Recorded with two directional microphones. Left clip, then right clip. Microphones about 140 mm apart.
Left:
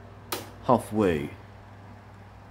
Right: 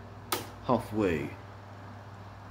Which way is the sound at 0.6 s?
40° left (ahead or behind).